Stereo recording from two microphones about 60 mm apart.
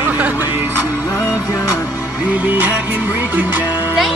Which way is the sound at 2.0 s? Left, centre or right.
Right.